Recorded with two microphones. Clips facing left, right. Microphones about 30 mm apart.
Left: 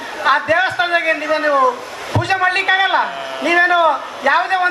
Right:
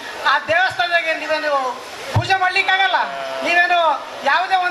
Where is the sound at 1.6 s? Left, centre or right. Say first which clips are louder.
Left 7 dB; centre.